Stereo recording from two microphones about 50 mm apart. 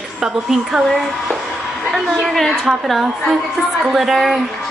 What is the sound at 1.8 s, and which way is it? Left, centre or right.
Speech, centre.